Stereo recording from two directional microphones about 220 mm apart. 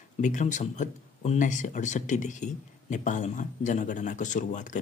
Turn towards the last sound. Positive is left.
turn(degrees=35)  # may be behind; listen again after turning